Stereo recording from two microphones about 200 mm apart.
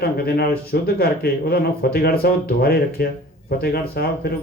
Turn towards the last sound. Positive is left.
turn(degrees=50)  # may be behind; listen again after turning